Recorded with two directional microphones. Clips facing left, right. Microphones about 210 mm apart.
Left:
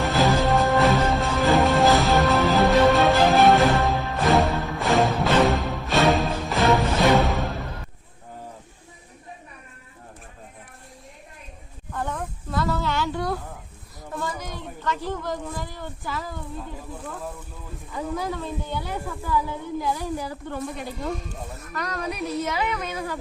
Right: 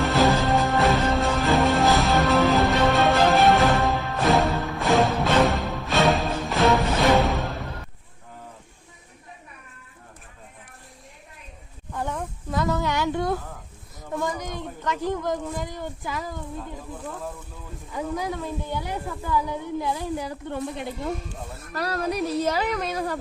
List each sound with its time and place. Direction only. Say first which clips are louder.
0.0 s music: even; centre (ahead or behind)
11.9 s a sound: even; 15° right (ahead or behind)
16.6 s snake: even; 5° left (ahead or behind)
17.9 s a woman's voice: even; 15° right (ahead or behind)
21.7 s a woman's voice: right 4 dB; 35° right (ahead or behind)